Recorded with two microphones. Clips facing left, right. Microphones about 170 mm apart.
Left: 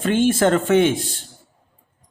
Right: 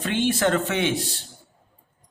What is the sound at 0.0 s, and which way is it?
A man's voice, 45° left (ahead or behind).